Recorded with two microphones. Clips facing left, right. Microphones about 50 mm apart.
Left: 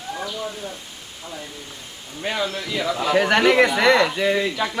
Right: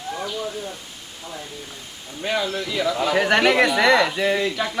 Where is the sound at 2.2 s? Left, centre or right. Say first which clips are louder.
Right 1 dB; centre.